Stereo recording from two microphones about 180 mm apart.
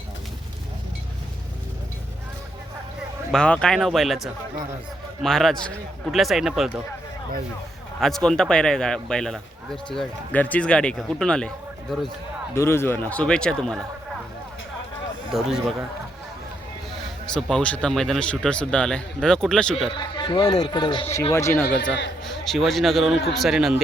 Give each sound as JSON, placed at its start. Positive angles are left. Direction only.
{"t": 3.3, "sound": "a man's voice", "side_deg": 5}
{"t": 8.0, "sound": "a man's voice", "side_deg": 0}
{"t": 12.5, "sound": "speech", "side_deg": 15}
{"t": 15.3, "sound": "a man's voice", "side_deg": 0}
{"t": 17.3, "sound": "a man's voice", "side_deg": 5}
{"t": 19.9, "sound": "speech", "side_deg": 25}
{"t": 22.2, "sound": "a man's voice", "side_deg": 0}